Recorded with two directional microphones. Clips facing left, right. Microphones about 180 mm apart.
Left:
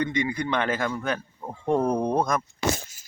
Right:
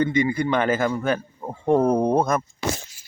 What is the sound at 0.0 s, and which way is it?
A man's voice, 5° right (ahead or behind).